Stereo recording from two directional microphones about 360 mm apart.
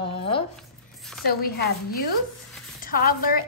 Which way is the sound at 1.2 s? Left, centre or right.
Left.